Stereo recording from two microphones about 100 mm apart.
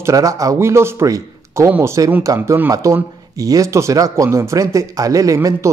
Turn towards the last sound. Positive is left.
turn(degrees=-35)  # may be behind; listen again after turning